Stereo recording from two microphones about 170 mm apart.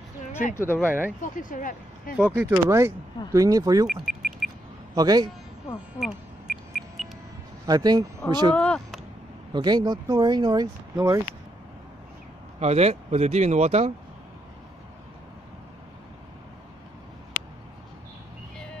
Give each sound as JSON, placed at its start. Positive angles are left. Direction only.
{"t": 0.6, "sound": "speech", "side_deg": 15}
{"t": 0.8, "sound": "speech", "side_deg": -10}
{"t": 1.2, "sound": "speech", "side_deg": 50}
{"t": 2.1, "sound": "speech", "side_deg": -5}
{"t": 2.5, "sound": "speech", "side_deg": -15}
{"t": 3.8, "sound": "a sound", "side_deg": -5}
{"t": 4.9, "sound": "speech", "side_deg": -25}
{"t": 5.9, "sound": "a sound", "side_deg": 0}
{"t": 7.6, "sound": "speech", "side_deg": -25}
{"t": 8.5, "sound": "speech", "side_deg": 5}
{"t": 9.5, "sound": "speech", "side_deg": -25}
{"t": 12.5, "sound": "speech", "side_deg": -40}